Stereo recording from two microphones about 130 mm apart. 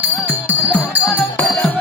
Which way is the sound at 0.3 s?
15° right (ahead or behind).